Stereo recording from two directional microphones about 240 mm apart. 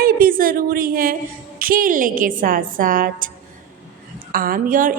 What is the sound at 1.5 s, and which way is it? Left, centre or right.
A woman's voice, right.